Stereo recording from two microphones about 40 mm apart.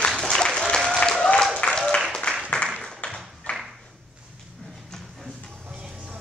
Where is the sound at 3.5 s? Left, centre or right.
Left.